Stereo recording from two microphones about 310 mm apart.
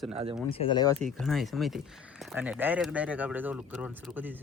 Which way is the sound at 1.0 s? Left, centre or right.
Centre.